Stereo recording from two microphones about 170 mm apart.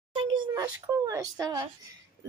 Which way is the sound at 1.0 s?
20° right (ahead or behind).